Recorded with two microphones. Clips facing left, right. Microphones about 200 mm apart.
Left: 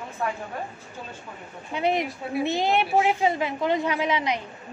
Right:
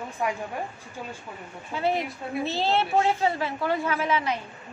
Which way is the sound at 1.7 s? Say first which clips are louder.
Left 2 dB; 20° left (ahead or behind).